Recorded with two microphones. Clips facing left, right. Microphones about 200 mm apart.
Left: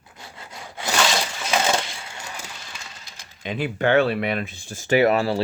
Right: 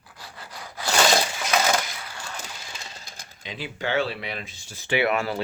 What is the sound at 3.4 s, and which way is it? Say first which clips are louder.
Speech: left 8 dB; 55° left (ahead or behind).